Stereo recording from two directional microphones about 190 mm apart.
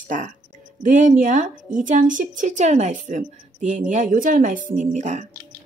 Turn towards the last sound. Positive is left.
turn(degrees=-40)  # may be behind; listen again after turning